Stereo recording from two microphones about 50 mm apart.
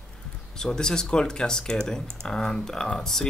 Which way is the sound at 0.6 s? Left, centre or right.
Centre.